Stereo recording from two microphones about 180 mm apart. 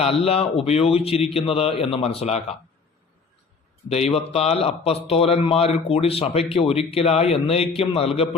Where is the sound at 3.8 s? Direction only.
35° left (ahead or behind).